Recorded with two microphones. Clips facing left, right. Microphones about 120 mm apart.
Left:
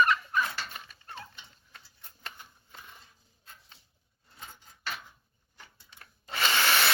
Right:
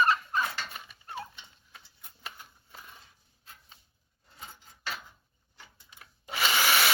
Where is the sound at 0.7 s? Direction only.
5° right (ahead or behind).